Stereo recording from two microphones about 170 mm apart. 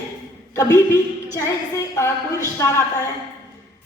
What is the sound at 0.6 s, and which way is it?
Speech, 20° left (ahead or behind).